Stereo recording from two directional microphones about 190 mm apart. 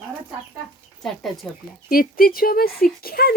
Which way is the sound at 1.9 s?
50° left (ahead or behind).